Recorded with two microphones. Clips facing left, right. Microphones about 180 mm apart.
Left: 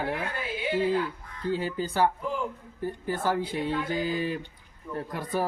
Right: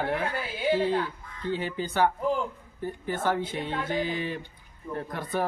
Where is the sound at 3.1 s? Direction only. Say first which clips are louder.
Right 1 dB; 35° left (ahead or behind).